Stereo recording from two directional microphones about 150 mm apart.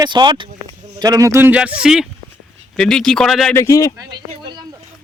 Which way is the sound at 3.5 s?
20° left (ahead or behind).